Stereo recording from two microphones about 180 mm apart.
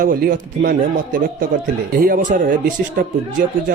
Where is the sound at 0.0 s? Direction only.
50° right (ahead or behind).